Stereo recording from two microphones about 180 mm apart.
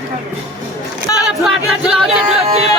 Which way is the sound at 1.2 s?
5° right (ahead or behind).